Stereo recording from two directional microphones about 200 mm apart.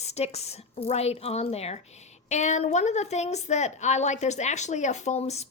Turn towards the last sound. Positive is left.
turn(degrees=30)  # may be behind; listen again after turning